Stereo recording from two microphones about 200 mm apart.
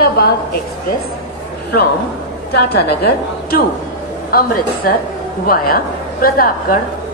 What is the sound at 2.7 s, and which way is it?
A woman's voice, 50° left (ahead or behind).